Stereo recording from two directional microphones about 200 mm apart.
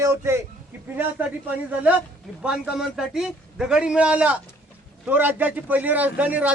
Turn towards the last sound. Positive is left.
turn(degrees=-5)  # may be behind; listen again after turning